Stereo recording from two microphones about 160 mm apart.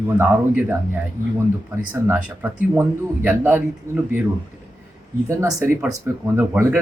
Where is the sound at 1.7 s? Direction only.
15° right (ahead or behind).